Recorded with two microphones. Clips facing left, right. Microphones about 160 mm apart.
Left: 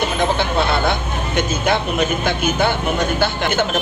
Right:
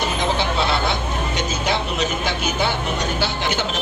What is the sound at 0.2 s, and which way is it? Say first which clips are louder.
Vehicle: left 4 dB; 55° left (ahead or behind).